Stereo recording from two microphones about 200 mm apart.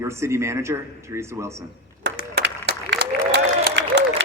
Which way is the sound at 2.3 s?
60° right (ahead or behind).